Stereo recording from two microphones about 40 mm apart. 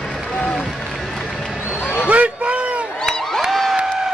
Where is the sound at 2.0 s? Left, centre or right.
Right.